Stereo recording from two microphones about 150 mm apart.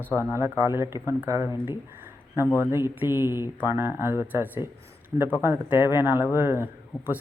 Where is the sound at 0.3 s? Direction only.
20° right (ahead or behind).